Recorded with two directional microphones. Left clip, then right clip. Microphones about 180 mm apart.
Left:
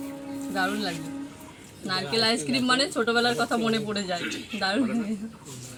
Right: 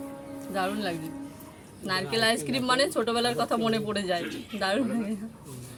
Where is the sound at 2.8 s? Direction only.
20° right (ahead or behind).